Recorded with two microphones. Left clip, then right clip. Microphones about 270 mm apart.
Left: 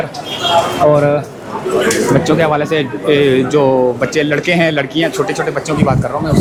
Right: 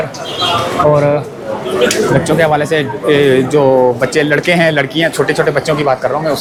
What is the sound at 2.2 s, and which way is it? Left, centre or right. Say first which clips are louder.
Speech: right 1 dB; centre.